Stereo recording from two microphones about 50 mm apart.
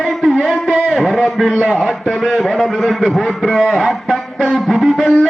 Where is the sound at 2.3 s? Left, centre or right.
Centre.